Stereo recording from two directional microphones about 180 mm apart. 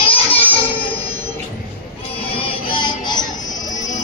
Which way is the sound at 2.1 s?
30° left (ahead or behind).